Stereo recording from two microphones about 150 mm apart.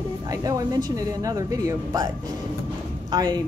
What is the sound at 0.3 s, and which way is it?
Speech, 25° right (ahead or behind).